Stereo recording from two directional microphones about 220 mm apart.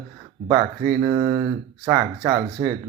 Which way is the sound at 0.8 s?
40° right (ahead or behind).